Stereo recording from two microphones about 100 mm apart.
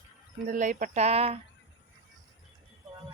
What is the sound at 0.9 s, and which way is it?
Speech, 90° right.